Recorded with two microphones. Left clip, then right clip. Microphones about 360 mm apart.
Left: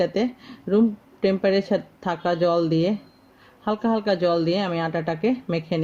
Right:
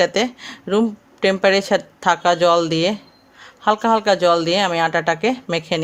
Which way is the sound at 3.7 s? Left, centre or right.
Right.